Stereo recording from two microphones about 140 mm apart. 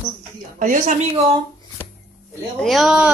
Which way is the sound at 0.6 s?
70° right (ahead or behind).